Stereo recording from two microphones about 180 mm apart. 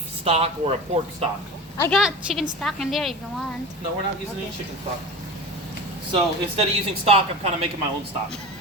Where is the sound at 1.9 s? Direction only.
Centre (ahead or behind).